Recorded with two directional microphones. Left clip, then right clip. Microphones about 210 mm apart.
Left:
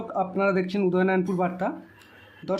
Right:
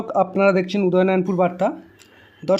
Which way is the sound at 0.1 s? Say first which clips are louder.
Right 8 dB; 25° right (ahead or behind).